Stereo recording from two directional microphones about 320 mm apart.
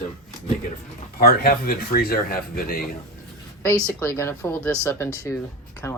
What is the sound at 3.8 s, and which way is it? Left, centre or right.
Speech, centre.